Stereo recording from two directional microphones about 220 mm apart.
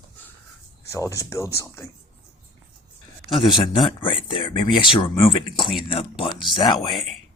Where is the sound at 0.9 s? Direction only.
15° left (ahead or behind).